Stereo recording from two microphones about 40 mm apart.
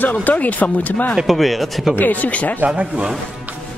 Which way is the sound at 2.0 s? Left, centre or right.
Left.